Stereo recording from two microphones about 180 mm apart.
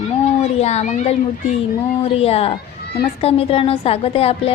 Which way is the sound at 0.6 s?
35° left (ahead or behind).